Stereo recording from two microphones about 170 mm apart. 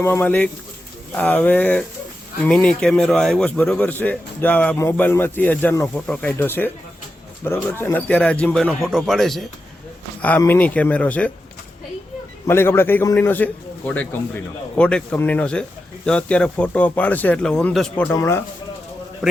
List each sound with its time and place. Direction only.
0.0 s a man's voice: 10° left (ahead or behind)
12.5 s a man's voice: 15° left (ahead or behind)
19.2 s a man's voice: centre (ahead or behind)